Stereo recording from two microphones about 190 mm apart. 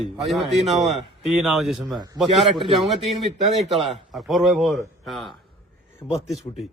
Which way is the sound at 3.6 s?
Centre (ahead or behind).